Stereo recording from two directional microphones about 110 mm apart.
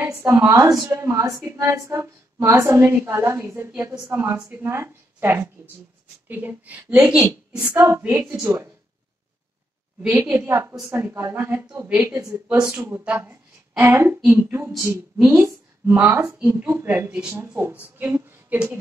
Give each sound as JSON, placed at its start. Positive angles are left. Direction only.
{"t": 0.0, "sound": "a woman's voice", "side_deg": -25}
{"t": 10.1, "sound": "a woman's voice", "side_deg": -20}
{"t": 12.7, "sound": "a woman's voice", "side_deg": -20}